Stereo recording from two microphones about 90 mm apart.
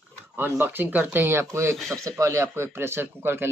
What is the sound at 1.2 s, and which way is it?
Speech, 30° right (ahead or behind).